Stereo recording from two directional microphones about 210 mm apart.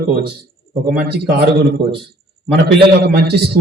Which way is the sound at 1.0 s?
50° right (ahead or behind).